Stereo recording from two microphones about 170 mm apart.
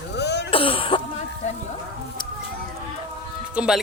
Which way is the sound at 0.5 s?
30° left (ahead or behind).